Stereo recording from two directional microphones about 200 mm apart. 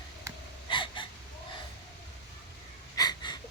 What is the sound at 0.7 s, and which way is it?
Gasp, 25° left (ahead or behind).